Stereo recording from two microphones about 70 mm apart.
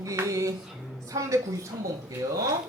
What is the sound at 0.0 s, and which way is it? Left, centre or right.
Speech, right.